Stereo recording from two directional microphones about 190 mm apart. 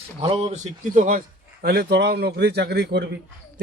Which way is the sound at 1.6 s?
55° right (ahead or behind).